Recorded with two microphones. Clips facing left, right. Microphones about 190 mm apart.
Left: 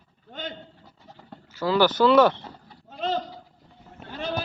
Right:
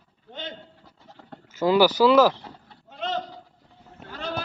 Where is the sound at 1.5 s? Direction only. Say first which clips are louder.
Right 3 dB; 20° right (ahead or behind); by 2.8 s 5° right (ahead or behind).